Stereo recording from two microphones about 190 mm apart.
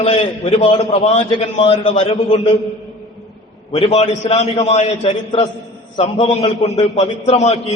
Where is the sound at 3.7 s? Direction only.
30° left (ahead or behind).